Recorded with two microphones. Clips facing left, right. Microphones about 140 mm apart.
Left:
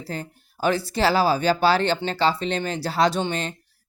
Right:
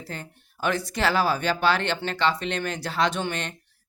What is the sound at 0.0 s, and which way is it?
Speech, 35° left (ahead or behind).